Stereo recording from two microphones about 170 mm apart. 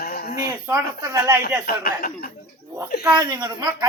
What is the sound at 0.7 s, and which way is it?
Speech, 15° right (ahead or behind).